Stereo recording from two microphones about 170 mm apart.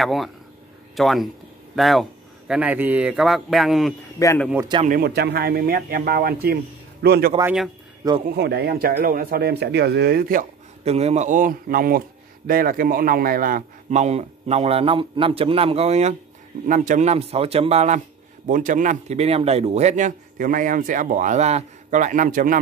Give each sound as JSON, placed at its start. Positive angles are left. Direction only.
{"t": 0.0, "sound": "speech", "side_deg": 0}
{"t": 4.2, "sound": "a man's voice", "side_deg": 20}
{"t": 4.8, "sound": "speech", "side_deg": -60}
{"t": 8.0, "sound": "speech", "side_deg": -20}
{"t": 8.4, "sound": "speech", "side_deg": -75}
{"t": 10.8, "sound": "a man's voice", "side_deg": -40}